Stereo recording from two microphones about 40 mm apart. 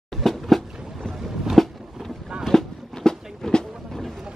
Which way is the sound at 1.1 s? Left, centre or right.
Centre.